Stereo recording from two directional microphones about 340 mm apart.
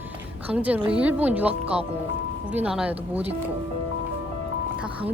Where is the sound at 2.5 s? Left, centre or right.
Centre.